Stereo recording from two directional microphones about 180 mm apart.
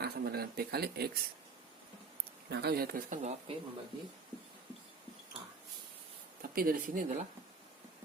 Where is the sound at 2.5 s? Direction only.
65° right (ahead or behind); by 3.3 s 45° right (ahead or behind).